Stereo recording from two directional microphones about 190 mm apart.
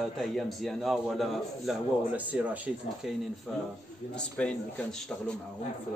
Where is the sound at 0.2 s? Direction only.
Centre (ahead or behind).